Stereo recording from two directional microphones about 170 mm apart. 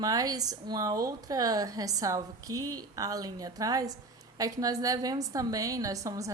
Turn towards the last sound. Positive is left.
turn(degrees=-20)  # may be behind; listen again after turning